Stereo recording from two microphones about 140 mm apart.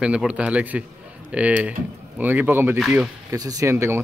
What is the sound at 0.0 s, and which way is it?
Speech, 5° right (ahead or behind).